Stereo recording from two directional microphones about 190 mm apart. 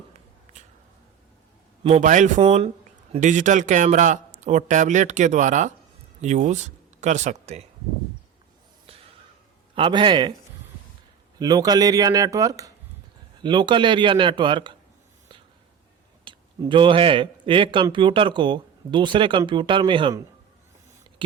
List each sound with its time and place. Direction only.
1.8 s speech: 35° right (ahead or behind)
9.7 s speech: 25° right (ahead or behind)
11.3 s speech: 20° right (ahead or behind)
16.2 s speech: 25° right (ahead or behind)